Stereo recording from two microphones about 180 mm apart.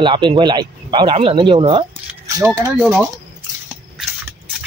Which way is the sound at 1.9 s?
15° right (ahead or behind).